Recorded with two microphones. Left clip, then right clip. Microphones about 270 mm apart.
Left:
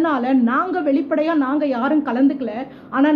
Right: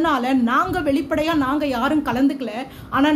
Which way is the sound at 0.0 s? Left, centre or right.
Centre.